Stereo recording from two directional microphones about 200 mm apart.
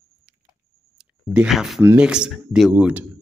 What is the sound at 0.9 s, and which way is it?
Speech, 5° right (ahead or behind).